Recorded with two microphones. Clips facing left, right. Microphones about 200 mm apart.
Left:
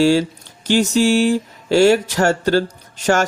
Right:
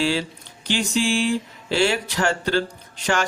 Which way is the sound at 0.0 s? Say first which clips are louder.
Left 9 dB; 45° left (ahead or behind).